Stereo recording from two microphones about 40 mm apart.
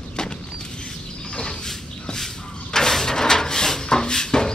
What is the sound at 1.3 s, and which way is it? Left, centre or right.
Cupboard open or close, centre.